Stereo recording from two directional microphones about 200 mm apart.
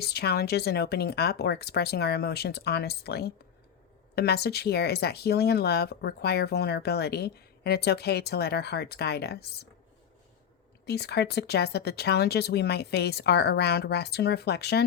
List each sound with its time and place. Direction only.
0.0 s speech: 55° left (ahead or behind)
10.8 s speech: 55° left (ahead or behind)